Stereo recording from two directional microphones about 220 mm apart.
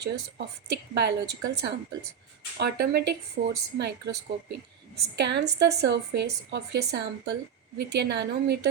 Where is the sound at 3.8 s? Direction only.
50° right (ahead or behind).